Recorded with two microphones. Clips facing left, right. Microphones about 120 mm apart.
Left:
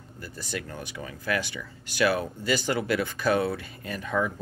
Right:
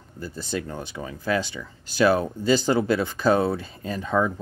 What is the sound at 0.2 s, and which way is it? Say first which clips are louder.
Speech: right 6 dB; 30° right (ahead or behind).